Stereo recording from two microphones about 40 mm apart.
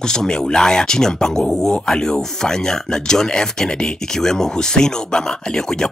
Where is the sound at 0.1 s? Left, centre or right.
Centre.